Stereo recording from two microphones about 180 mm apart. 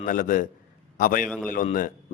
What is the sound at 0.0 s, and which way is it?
A man's voice, 50° left (ahead or behind).